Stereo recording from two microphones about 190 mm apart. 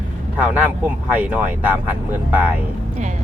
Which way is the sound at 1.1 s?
10° right (ahead or behind).